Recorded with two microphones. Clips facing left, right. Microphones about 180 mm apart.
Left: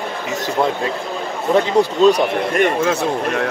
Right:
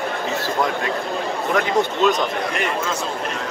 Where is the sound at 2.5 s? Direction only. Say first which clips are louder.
Left 7 dB; 60° left (ahead or behind).